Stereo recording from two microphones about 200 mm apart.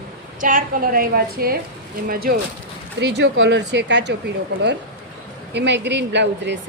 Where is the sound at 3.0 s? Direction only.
60° right (ahead or behind).